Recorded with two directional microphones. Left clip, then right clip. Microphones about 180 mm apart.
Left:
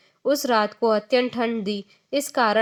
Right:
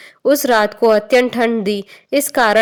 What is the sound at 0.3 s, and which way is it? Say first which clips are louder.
Speech: right 8 dB; 30° right (ahead or behind).